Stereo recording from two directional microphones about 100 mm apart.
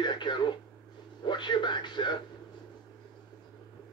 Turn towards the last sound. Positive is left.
turn(degrees=50)  # may be behind; listen again after turning